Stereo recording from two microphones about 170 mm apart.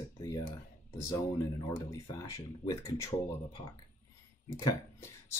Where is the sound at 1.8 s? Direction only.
20° left (ahead or behind).